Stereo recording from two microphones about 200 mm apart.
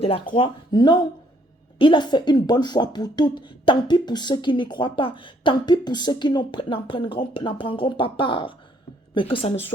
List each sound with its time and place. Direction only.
0.0 s speech: 30° left (ahead or behind)